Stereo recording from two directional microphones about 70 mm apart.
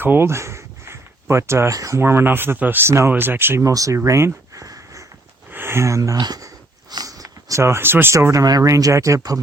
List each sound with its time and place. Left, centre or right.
0.0 s speech: right
2.0 s speech: right
3.6 s speech: right
5.5 s a sound: right
6.1 s speech: right
6.9 s a sound: right
7.6 s speech: right
8.1 s speech: right
8.4 s speech: right
8.7 s speech: right